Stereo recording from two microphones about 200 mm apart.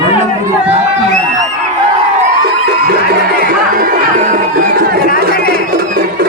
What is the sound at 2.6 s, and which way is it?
Music, 55° right (ahead or behind).